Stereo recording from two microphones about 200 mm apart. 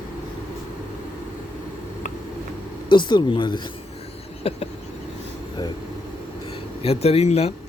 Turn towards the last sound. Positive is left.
turn(degrees=30)  # may be behind; listen again after turning